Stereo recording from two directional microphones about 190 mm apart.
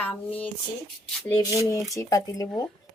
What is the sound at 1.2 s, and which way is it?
Rub, 10° left (ahead or behind).